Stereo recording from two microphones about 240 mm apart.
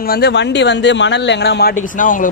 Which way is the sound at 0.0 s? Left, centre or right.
Left.